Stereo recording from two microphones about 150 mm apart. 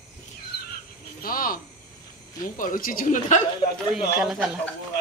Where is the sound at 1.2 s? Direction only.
70° left (ahead or behind).